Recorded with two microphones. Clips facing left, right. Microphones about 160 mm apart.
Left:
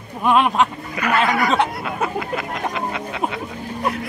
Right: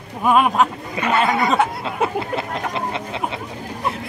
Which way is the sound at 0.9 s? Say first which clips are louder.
Even; 25° right (ahead or behind).